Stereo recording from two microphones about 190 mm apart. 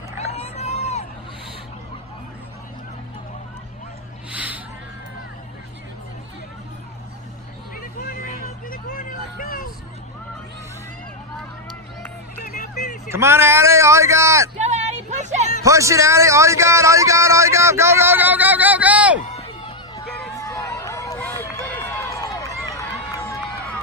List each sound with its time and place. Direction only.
0.3 s crowd: 35° left (ahead or behind)
4.3 s a sound: 5° right (ahead or behind)
7.8 s vehicle: 50° left (ahead or behind)
12.4 s vehicle: 40° left (ahead or behind)
13.1 s a man's voice: 15° right (ahead or behind)
14.6 s a sound: 40° right (ahead or behind)
15.6 s a man's voice: 15° right (ahead or behind)
19.3 s a sound: 30° left (ahead or behind)
20.4 s run: 15° left (ahead or behind)